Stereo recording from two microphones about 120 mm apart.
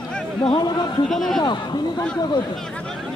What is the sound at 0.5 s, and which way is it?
Speech, 40° left (ahead or behind).